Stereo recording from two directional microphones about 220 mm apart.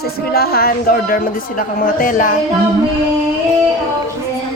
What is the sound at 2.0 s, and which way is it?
Music, 40° left (ahead or behind).